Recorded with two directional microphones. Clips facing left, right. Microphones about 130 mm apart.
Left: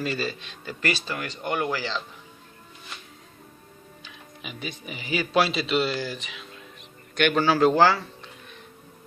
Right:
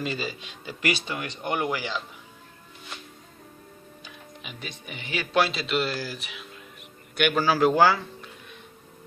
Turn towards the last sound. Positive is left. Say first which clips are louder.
# left 1 dB
turn(degrees=-10)  # may be behind; listen again after turning